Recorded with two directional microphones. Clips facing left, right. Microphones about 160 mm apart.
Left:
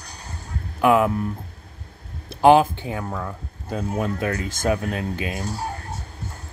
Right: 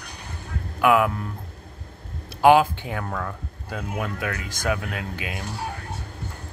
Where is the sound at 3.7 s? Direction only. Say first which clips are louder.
Left 5 dB; 30° left (ahead or behind).